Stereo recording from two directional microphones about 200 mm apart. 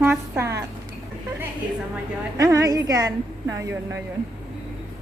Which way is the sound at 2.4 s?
15° right (ahead or behind).